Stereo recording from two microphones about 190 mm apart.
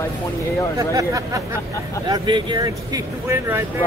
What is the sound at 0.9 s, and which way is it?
Speech, 15° right (ahead or behind).